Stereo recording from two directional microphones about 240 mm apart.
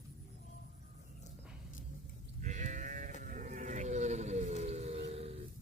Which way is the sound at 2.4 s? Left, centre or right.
Right.